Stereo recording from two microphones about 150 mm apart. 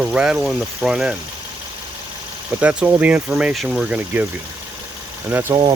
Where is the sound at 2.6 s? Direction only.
5° right (ahead or behind).